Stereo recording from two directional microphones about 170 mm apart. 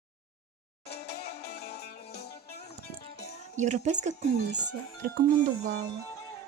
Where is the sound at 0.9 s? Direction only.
70° left (ahead or behind).